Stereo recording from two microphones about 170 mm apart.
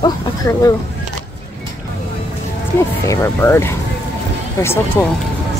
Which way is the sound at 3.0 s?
15° left (ahead or behind).